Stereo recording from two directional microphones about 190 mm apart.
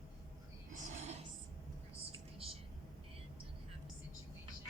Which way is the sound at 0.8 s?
40° right (ahead or behind).